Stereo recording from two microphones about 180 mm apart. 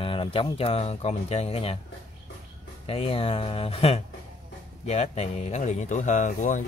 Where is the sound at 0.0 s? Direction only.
30° left (ahead or behind).